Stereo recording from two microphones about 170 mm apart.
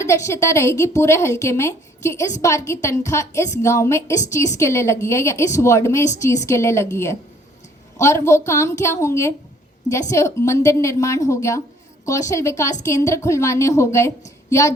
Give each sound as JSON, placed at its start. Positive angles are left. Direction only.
{"t": 0.0, "sound": "a woman's voice", "side_deg": 15}